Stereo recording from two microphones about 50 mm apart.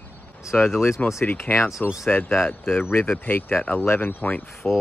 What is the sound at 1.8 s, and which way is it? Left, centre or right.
Speech, left.